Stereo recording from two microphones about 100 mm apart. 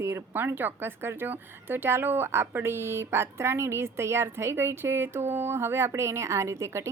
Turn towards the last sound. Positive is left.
turn(degrees=-30)  # may be behind; listen again after turning